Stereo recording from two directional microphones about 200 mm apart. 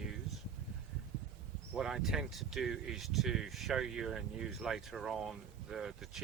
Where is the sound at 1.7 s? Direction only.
Centre (ahead or behind).